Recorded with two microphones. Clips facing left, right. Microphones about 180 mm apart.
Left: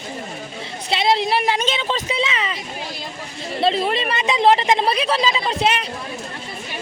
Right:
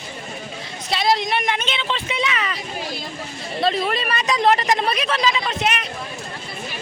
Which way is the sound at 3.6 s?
25° left (ahead or behind).